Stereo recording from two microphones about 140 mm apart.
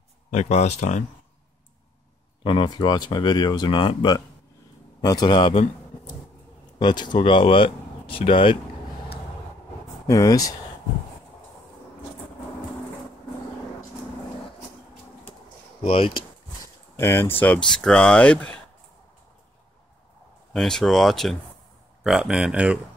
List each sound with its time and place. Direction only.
0.3 s speech: 55° left (ahead or behind)
2.4 s speech: 35° left (ahead or behind)
6.8 s speech: 30° left (ahead or behind)
10.0 s speech: 25° left (ahead or behind)
15.8 s speech: 40° left (ahead or behind)
16.9 s speech: 15° left (ahead or behind)
20.5 s speech: 5° left (ahead or behind)